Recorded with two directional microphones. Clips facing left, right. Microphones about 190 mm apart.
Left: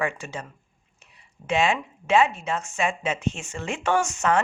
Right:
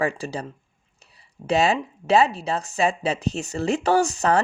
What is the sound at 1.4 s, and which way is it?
Speech, 35° right (ahead or behind).